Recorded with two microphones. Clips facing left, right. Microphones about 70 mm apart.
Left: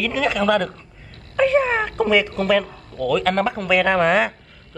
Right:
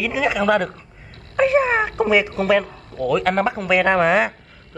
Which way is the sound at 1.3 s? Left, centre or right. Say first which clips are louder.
Right 1 dB; centre.